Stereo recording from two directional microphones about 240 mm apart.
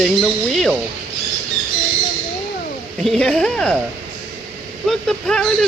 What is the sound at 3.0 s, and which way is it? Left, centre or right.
Speech, centre.